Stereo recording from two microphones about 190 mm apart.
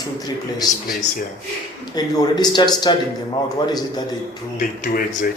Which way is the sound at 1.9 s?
20° left (ahead or behind).